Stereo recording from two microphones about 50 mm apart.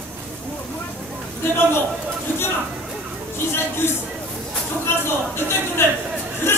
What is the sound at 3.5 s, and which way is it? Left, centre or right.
A man's voice, left.